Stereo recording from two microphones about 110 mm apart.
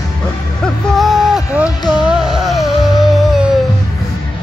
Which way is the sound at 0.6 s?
Centre (ahead or behind).